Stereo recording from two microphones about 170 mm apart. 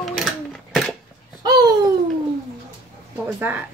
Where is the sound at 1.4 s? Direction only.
25° right (ahead or behind).